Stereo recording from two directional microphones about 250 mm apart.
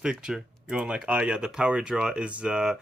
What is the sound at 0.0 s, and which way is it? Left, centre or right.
Speech, centre.